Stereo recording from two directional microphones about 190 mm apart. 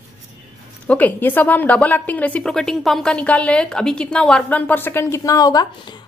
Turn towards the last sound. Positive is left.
turn(degrees=20)  # may be behind; listen again after turning